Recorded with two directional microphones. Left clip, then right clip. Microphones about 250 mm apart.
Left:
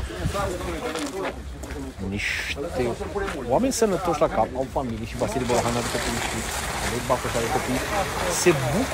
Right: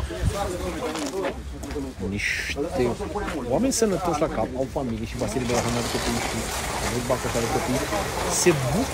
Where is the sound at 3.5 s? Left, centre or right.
Centre.